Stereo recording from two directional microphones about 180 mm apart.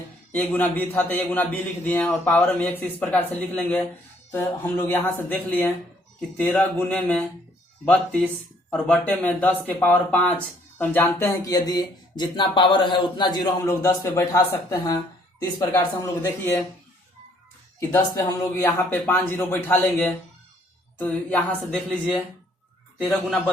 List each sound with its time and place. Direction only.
0.3 s a man's voice: 10° left (ahead or behind)
17.7 s a man's voice: 15° left (ahead or behind)